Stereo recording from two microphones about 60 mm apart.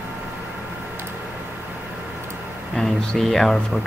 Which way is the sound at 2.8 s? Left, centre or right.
Centre.